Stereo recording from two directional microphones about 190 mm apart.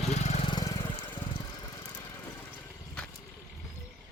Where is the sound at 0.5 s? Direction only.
20° left (ahead or behind).